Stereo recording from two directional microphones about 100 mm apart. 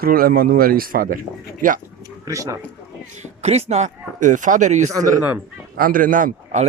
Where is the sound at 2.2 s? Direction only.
30° right (ahead or behind).